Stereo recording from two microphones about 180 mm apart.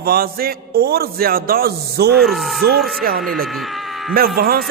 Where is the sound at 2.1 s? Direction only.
Centre (ahead or behind).